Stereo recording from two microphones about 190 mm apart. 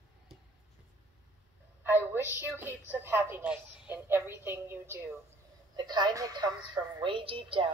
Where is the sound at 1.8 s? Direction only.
10° right (ahead or behind).